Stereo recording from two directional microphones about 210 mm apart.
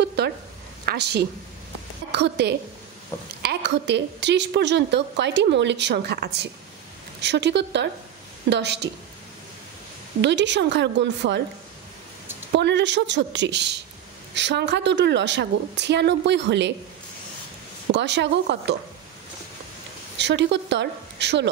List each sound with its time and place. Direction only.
0.0 s a sound: 50° right (ahead or behind)
0.8 s a woman's voice: 50° right (ahead or behind)
10.2 s a woman's voice: 55° right (ahead or behind)
12.5 s a woman's voice: 55° right (ahead or behind)
17.9 s a woman's voice: 55° right (ahead or behind)
20.2 s a woman's voice: 55° right (ahead or behind)